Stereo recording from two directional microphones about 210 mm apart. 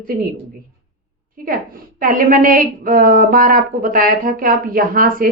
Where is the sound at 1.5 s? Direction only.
40° right (ahead or behind).